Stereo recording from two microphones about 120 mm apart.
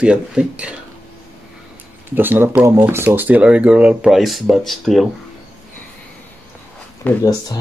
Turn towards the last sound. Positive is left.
turn(degrees=15)  # may be behind; listen again after turning